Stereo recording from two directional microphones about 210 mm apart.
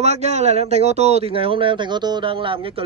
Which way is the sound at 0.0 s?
30° right (ahead or behind).